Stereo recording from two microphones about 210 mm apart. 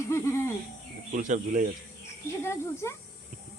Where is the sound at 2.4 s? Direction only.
15° left (ahead or behind).